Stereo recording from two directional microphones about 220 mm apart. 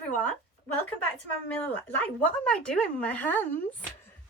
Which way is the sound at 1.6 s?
10° left (ahead or behind).